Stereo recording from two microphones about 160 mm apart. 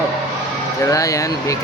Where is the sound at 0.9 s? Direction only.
20° left (ahead or behind).